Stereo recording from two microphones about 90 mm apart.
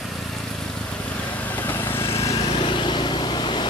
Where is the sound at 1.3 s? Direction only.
20° left (ahead or behind).